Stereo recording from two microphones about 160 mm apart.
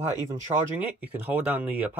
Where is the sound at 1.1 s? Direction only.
10° right (ahead or behind).